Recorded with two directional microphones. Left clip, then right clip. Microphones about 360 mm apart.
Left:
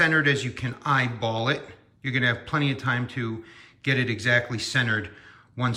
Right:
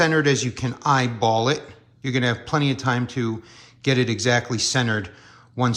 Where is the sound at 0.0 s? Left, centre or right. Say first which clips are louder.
Right 2 dB; centre.